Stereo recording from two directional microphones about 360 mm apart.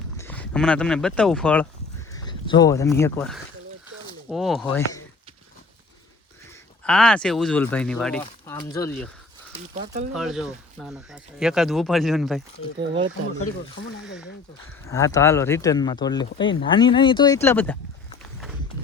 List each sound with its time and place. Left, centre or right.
0.2 s speech: centre
6.8 s speech: centre
8.2 s a sound: centre
8.7 s speech: centre
9.7 s speech: centre
10.2 s speech: centre
14.0 s speech: centre
14.8 s speech: centre
18.2 s walk: centre